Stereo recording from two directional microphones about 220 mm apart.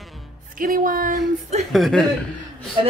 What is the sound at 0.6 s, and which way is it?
Speech, 40° right (ahead or behind).